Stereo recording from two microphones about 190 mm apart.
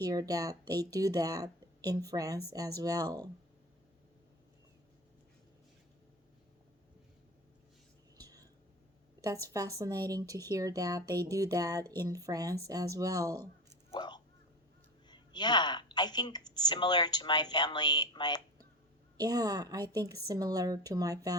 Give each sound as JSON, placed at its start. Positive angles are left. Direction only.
{"t": 0.0, "sound": "speech", "side_deg": -20}
{"t": 8.2, "sound": "whispering", "side_deg": -20}
{"t": 9.2, "sound": "speech", "side_deg": -15}
{"t": 13.9, "sound": "a sound", "side_deg": 25}
{"t": 15.1, "sound": "speech", "side_deg": 20}
{"t": 19.1, "sound": "speech", "side_deg": -20}